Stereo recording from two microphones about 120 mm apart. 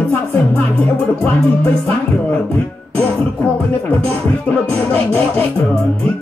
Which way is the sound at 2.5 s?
10° left (ahead or behind).